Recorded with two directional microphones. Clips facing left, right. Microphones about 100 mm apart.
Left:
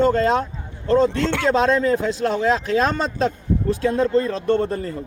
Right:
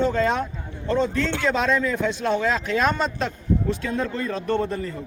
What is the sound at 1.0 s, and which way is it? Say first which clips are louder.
Speech: left 4 dB; 65° left (ahead or behind).